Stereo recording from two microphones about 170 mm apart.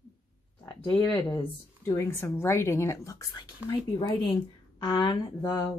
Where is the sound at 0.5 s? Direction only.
5° left (ahead or behind).